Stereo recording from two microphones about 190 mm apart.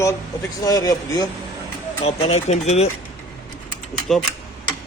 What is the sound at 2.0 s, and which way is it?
Speech, 35° left (ahead or behind).